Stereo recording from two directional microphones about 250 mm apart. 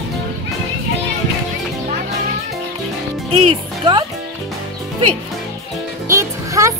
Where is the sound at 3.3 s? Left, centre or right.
Right.